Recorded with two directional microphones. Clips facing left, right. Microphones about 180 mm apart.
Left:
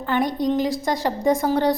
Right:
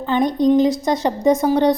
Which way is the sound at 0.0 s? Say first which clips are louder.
Right 5 dB; 20° right (ahead or behind).